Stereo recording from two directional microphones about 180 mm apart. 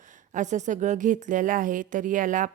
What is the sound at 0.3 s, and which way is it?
A woman's voice, 40° right (ahead or behind).